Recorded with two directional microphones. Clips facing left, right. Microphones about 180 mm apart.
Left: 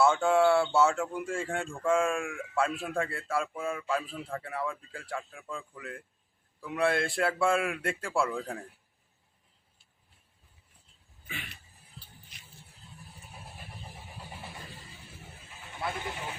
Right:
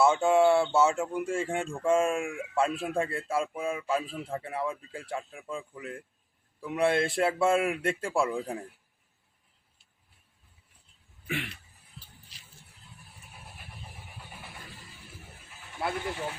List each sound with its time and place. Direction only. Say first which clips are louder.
0.0 s speech: right 2 dB; 15° right (ahead or behind)
11.3 s speech: right 10 dB; 75° right (ahead or behind)